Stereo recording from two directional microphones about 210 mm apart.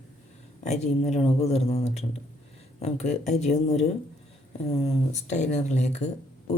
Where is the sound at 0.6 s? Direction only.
35° left (ahead or behind).